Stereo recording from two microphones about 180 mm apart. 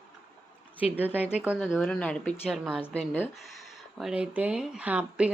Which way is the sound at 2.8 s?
10° left (ahead or behind).